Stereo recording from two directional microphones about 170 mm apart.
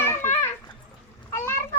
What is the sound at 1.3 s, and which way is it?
Cat, 15° left (ahead or behind).